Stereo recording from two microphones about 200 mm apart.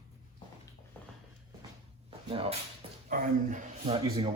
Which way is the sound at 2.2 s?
25° right (ahead or behind).